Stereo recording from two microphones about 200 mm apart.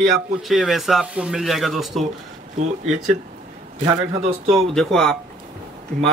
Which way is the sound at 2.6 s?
35° right (ahead or behind).